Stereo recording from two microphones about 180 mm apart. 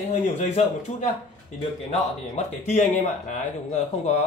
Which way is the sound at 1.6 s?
35° left (ahead or behind).